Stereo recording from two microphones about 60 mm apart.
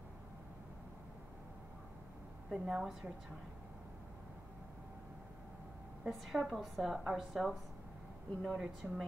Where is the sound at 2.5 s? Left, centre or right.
Centre.